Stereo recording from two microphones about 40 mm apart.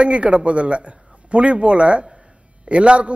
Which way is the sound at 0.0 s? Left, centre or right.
Right.